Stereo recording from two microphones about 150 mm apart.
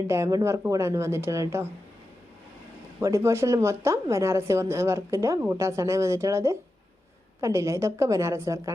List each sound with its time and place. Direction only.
0.1 s a woman's voice: 20° right (ahead or behind)
3.0 s a woman's voice: 20° right (ahead or behind)